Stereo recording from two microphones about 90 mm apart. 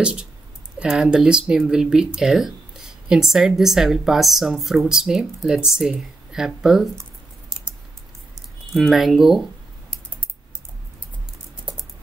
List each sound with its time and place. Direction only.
0.0 s speech: 10° right (ahead or behind)
8.7 s speech: centre (ahead or behind)